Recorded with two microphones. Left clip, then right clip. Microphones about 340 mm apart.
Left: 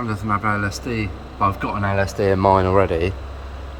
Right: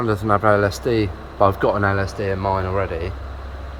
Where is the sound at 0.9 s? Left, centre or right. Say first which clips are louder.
Right 6 dB; right.